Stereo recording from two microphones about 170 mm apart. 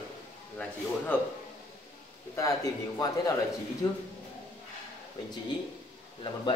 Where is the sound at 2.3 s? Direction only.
20° left (ahead or behind).